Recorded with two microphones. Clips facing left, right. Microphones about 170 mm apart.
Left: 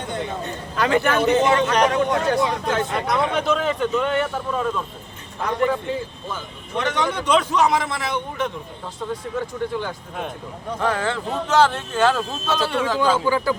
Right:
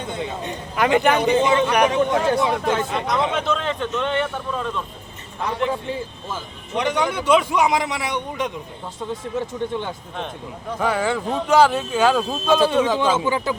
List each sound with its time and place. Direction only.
0.2 s speech: 15° right (ahead or behind)
2.9 s speech: centre (ahead or behind)
6.7 s speech: 10° right (ahead or behind)
9.6 s speech: 20° right (ahead or behind)
10.8 s speech: 5° right (ahead or behind)